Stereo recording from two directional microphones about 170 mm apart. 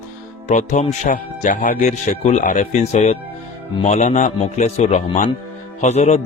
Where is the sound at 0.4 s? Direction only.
45° left (ahead or behind).